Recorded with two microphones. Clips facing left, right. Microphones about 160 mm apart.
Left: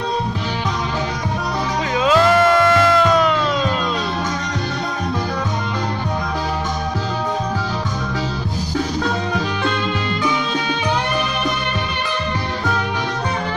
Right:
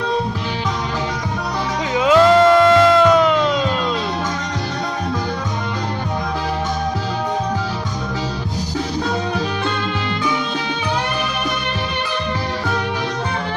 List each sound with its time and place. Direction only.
1.9 s music: 20° right (ahead or behind)